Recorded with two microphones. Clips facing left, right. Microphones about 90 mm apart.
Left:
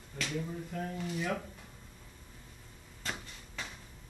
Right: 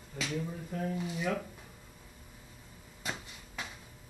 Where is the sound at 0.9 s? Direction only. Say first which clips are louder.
Right 1 dB; 15° right (ahead or behind).